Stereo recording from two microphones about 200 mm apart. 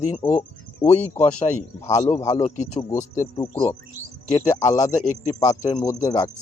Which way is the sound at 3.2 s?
20° left (ahead or behind).